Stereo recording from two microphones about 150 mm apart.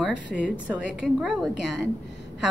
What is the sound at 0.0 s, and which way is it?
A woman's voice, 5° right (ahead or behind).